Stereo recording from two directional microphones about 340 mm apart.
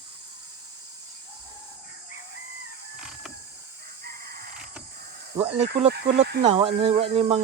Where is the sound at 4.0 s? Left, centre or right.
Right.